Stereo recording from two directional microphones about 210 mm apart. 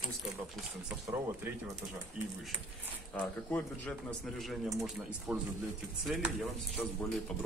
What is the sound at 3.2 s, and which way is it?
A man's voice, 10° left (ahead or behind).